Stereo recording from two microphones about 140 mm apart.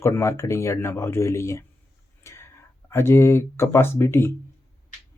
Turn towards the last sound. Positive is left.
turn(degrees=15)  # may be behind; listen again after turning